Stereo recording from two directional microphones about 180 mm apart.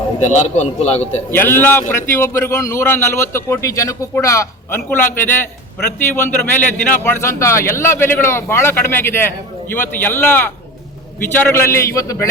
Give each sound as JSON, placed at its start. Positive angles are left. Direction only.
{"t": 0.2, "sound": "a man's voice", "side_deg": 40}
{"t": 1.3, "sound": "a man's voice", "side_deg": 10}